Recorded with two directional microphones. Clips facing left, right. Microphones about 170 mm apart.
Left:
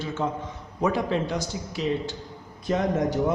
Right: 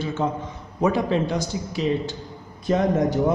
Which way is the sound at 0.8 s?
25° right (ahead or behind).